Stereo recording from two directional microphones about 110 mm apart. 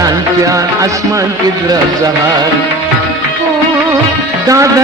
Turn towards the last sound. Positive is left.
turn(degrees=-30)  # may be behind; listen again after turning